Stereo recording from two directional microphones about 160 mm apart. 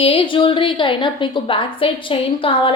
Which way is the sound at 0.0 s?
35° left (ahead or behind).